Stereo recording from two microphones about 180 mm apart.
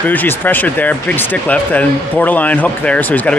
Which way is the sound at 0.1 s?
10° left (ahead or behind).